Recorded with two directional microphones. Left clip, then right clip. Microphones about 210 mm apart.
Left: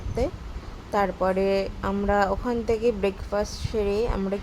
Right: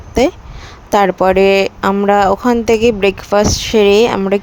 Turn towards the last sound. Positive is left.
turn(degrees=-45)  # may be behind; listen again after turning